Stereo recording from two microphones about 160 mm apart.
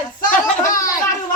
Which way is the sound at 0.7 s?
20° left (ahead or behind).